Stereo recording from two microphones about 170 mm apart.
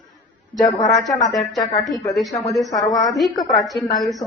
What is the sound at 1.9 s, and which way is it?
A woman's voice, centre (ahead or behind).